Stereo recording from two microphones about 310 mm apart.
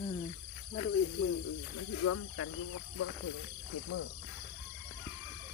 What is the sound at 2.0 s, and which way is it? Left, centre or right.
Speech, left.